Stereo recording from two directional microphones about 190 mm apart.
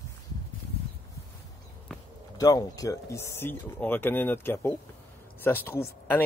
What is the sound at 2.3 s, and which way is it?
Speech, 20° left (ahead or behind).